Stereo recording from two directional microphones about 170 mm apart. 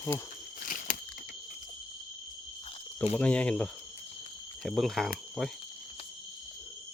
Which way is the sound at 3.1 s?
5° left (ahead or behind).